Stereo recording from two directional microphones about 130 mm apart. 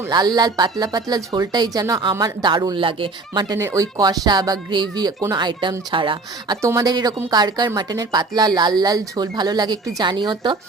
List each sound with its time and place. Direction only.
0.1 s a woman's voice: 30° right (ahead or behind)
3.6 s a woman's voice: 25° right (ahead or behind); by 6.6 s 40° right (ahead or behind)
6.6 s a woman's voice: 25° right (ahead or behind)